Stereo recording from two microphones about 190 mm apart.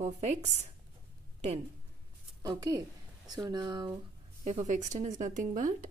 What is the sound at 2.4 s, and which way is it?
Speech, 20° right (ahead or behind).